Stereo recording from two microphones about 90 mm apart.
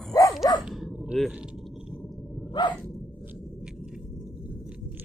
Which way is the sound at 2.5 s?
55° left (ahead or behind).